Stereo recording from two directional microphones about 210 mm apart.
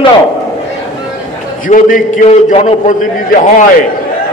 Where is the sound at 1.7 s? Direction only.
40° left (ahead or behind).